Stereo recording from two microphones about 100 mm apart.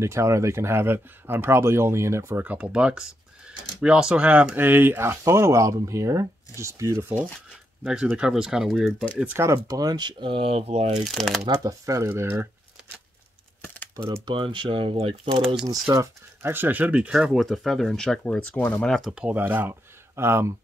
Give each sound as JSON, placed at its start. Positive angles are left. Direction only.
{"t": 0.0, "sound": "speech", "side_deg": -30}
{"t": 2.4, "sound": "speech", "side_deg": -15}
{"t": 7.8, "sound": "speech", "side_deg": -10}
{"t": 9.2, "sound": "speech", "side_deg": -25}
{"t": 9.7, "sound": "speech", "side_deg": -40}
{"t": 11.1, "sound": "speech", "side_deg": 0}
{"t": 11.5, "sound": "speech", "side_deg": -35}
{"t": 14.2, "sound": "speech", "side_deg": -55}
{"t": 15.2, "sound": "speech", "side_deg": -60}
{"t": 15.9, "sound": "speech", "side_deg": -35}
{"t": 16.4, "sound": "speech", "side_deg": -20}
{"t": 18.9, "sound": "speech", "side_deg": -5}
{"t": 19.3, "sound": "speech", "side_deg": -20}